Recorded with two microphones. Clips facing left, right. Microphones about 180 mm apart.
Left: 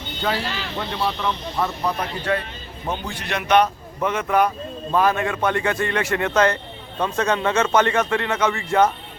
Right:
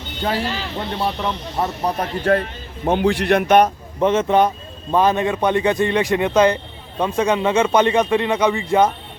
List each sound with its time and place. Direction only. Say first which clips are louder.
0.2 s speech: right 3 dB; 40° right (ahead or behind)
3.0 s a man's voice: right 12 dB; 75° right (ahead or behind); by 3.7 s 50° right (ahead or behind)
4.0 s a man's voice: right 4 dB; 25° right (ahead or behind)